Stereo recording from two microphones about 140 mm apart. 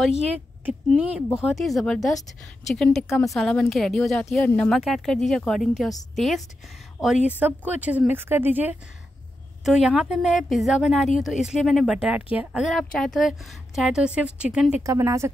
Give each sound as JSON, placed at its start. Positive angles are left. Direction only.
{"t": 0.9, "sound": "speech", "side_deg": -5}
{"t": 7.2, "sound": "speech", "side_deg": -10}
{"t": 14.8, "sound": "speech", "side_deg": -20}